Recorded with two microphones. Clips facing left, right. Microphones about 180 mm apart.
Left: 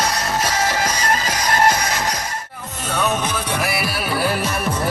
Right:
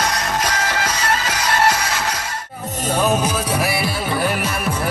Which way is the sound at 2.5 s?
40° right (ahead or behind).